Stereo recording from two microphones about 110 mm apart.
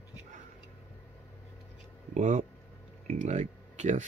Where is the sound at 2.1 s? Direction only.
90° right.